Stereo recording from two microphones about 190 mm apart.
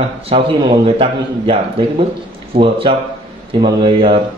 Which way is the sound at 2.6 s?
25° right (ahead or behind).